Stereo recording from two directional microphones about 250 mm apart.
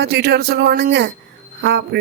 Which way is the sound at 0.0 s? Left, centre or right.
Right.